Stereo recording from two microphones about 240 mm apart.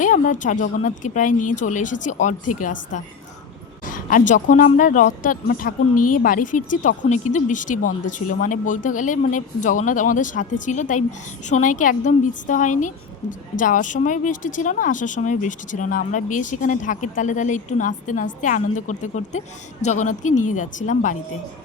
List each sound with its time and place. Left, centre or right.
0.0 s speech: left
3.8 s a sound: left
4.3 s speech: left